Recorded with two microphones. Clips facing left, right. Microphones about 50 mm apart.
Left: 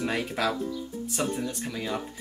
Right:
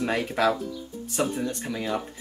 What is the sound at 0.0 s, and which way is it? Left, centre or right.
Speech, centre.